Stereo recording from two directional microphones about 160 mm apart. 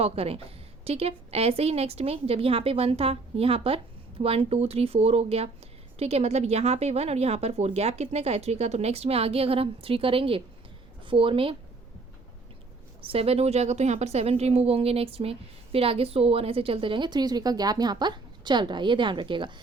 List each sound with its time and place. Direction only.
0.0 s a woman's voice: 40° right (ahead or behind)
13.0 s a woman's voice: 35° right (ahead or behind)